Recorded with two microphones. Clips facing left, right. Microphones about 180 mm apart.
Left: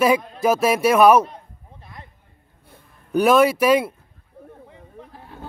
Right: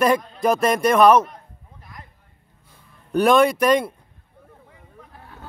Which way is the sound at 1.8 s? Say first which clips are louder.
Left 1 dB; 25° left (ahead or behind).